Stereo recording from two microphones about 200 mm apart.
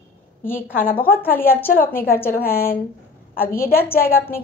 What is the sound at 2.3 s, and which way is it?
A woman's voice, 50° left (ahead or behind).